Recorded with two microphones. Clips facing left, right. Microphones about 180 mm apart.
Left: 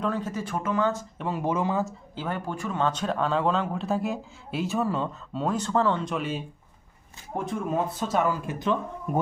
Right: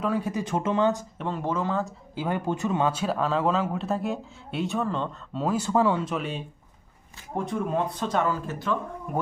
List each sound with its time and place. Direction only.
0.0 s speech: 10° right (ahead or behind)
1.2 s speech: 10° left (ahead or behind)
2.1 s speech: 15° right (ahead or behind); by 9.2 s 20° left (ahead or behind)